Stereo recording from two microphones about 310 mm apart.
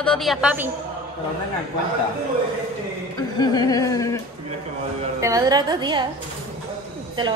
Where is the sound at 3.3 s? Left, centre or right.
Centre.